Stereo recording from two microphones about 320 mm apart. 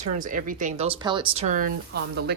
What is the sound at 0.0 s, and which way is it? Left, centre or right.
Speech, right.